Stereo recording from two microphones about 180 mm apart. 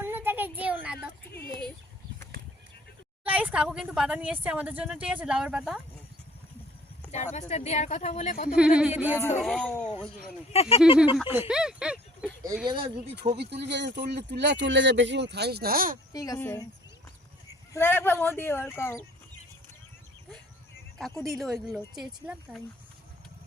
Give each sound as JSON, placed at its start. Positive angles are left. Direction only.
{"t": 0.0, "sound": "a sound", "side_deg": -10}
{"t": 3.2, "sound": "speech", "side_deg": -5}
{"t": 7.1, "sound": "speech", "side_deg": 40}
{"t": 8.5, "sound": "speech", "side_deg": -5}
{"t": 9.4, "sound": "speech", "side_deg": 5}
{"t": 10.5, "sound": "speech", "side_deg": 35}
{"t": 11.2, "sound": "speech", "side_deg": -10}
{"t": 12.6, "sound": "speech", "side_deg": -25}
{"t": 13.4, "sound": "speech", "side_deg": -70}
{"t": 16.1, "sound": "a woman's voice", "side_deg": 20}
{"t": 21.2, "sound": "speech", "side_deg": 0}